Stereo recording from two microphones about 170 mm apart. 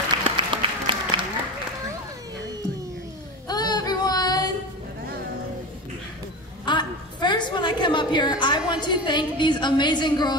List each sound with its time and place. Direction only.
0.2 s applause: 30° right (ahead or behind)
3.4 s child singing: 25° left (ahead or behind)
6.6 s a sound: 25° left (ahead or behind)